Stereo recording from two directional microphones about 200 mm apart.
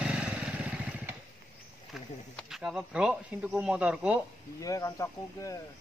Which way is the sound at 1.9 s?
Centre (ahead or behind).